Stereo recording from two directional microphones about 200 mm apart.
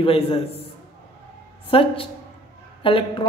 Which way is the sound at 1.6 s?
25° left (ahead or behind).